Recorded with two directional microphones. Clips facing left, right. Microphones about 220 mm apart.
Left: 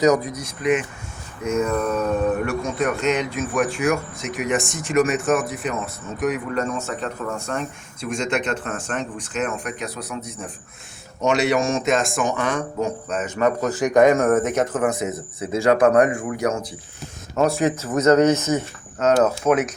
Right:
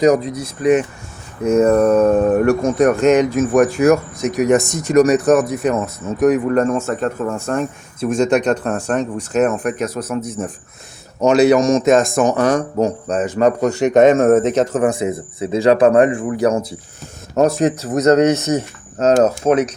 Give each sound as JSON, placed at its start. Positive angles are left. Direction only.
{"t": 0.6, "sound": "speech", "side_deg": -40}
{"t": 8.3, "sound": "speech", "side_deg": -40}
{"t": 17.3, "sound": "speech", "side_deg": -40}
{"t": 19.4, "sound": "speech", "side_deg": -25}